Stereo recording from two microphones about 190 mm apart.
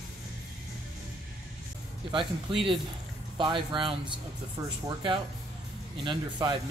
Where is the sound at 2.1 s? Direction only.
25° right (ahead or behind).